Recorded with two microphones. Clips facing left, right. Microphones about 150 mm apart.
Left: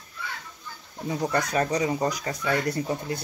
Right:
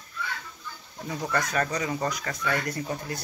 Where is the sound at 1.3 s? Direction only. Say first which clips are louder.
Left 2 dB; 20° left (ahead or behind).